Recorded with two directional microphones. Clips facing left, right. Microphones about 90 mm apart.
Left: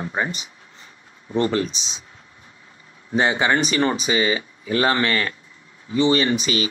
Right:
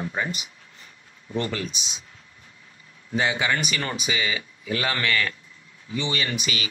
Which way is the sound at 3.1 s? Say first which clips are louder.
Left 5 dB; 35° left (ahead or behind).